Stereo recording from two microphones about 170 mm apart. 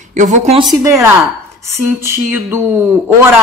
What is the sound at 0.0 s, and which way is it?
Speech, 45° right (ahead or behind).